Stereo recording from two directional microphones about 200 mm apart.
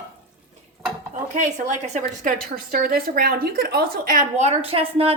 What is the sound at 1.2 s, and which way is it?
A woman's voice, 40° right (ahead or behind).